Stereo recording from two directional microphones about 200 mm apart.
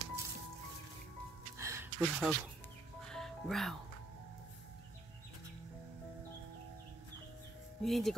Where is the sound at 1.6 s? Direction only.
15° right (ahead or behind).